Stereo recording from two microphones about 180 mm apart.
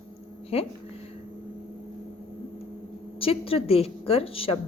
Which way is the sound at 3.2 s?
30° left (ahead or behind).